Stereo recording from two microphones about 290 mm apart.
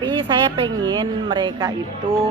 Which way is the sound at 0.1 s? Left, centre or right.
Centre.